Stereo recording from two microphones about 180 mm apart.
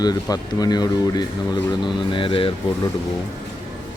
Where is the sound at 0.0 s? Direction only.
20° left (ahead or behind).